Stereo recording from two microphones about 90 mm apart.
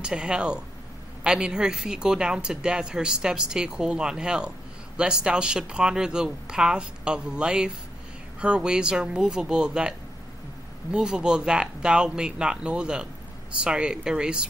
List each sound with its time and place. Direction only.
0.0 s speech: 10° right (ahead or behind)